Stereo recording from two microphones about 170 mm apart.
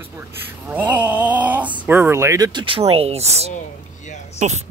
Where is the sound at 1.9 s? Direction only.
15° right (ahead or behind).